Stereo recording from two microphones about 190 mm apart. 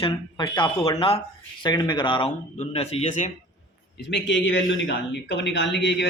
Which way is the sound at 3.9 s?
65° left (ahead or behind).